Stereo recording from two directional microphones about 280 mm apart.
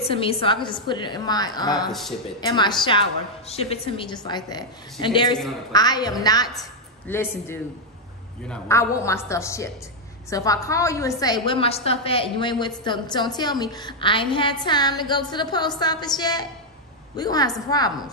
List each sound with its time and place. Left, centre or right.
0.0 s a woman's voice: centre
1.9 s speech: centre
2.4 s a woman's voice: centre